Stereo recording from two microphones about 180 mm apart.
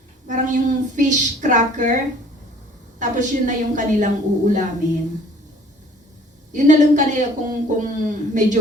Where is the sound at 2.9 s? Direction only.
45° right (ahead or behind).